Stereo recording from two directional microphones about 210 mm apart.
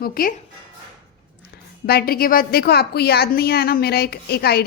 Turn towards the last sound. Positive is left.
turn(degrees=50)  # may be behind; listen again after turning